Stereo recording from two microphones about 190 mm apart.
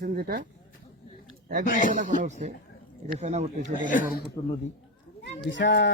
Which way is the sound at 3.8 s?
40° left (ahead or behind).